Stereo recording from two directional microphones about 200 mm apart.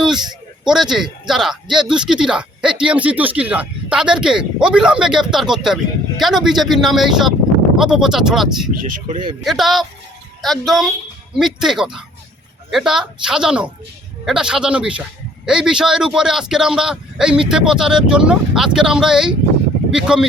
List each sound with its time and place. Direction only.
0.6 s speech: 5° right (ahead or behind)
8.8 s speech: 40° right (ahead or behind)
9.4 s speech: centre (ahead or behind)